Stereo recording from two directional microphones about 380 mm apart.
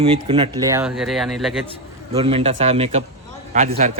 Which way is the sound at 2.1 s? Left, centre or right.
Centre.